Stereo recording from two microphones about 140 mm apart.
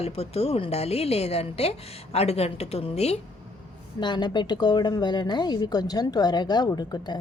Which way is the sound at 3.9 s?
30° left (ahead or behind).